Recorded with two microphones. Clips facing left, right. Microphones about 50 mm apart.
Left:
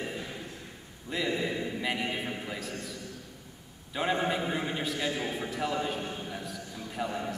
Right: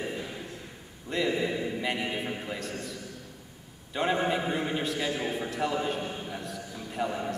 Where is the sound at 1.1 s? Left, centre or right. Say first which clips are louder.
Right 3 dB; centre.